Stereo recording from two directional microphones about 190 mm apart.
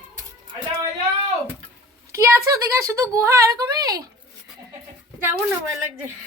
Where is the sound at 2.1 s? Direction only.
15° right (ahead or behind).